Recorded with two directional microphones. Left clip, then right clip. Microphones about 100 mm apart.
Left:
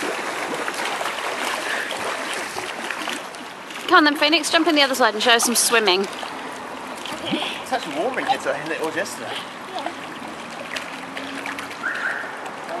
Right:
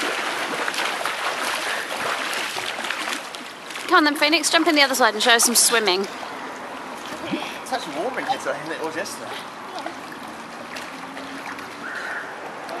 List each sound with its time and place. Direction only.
0.0 s boat: 20° right (ahead or behind)
3.8 s speech: 5° right (ahead or behind)
7.2 s speech: centre (ahead or behind)